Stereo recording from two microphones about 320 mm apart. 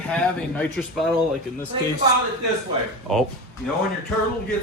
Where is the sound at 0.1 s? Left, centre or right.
Centre.